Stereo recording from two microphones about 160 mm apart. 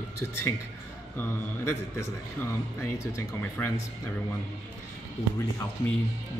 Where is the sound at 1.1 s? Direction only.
15° left (ahead or behind).